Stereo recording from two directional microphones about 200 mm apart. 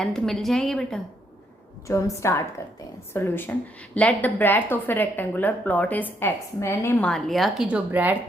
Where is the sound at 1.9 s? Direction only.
15° left (ahead or behind).